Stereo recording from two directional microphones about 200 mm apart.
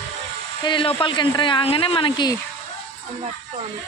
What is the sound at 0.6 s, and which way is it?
Speech, 25° left (ahead or behind).